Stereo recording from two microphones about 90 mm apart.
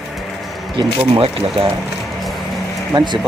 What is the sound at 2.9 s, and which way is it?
Speech, 55° right (ahead or behind).